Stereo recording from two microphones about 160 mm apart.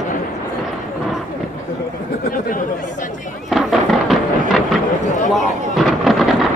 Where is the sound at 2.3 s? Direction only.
55° left (ahead or behind).